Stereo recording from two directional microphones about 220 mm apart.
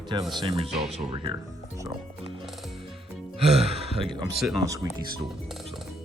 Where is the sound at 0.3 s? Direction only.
25° right (ahead or behind).